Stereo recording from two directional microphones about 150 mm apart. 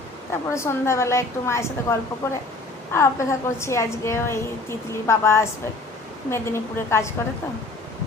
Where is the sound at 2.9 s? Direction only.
20° left (ahead or behind).